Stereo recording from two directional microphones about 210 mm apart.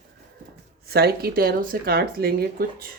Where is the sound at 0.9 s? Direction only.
50° right (ahead or behind).